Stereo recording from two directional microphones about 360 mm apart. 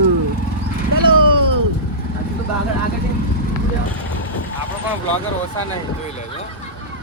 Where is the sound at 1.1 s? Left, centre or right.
Right.